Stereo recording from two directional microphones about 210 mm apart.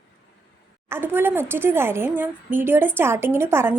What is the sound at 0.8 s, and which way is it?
A woman's voice, 10° right (ahead or behind).